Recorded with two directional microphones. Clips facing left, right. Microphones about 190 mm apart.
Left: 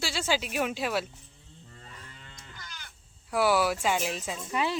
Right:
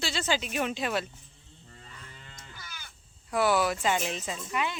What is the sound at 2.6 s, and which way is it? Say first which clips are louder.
Crow: left 2 dB; 10° right (ahead or behind).